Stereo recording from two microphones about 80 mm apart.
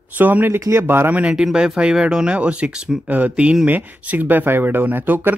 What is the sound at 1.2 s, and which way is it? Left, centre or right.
Speech, centre.